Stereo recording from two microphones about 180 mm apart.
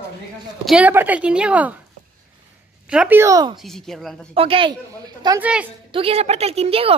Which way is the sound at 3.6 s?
Centre (ahead or behind).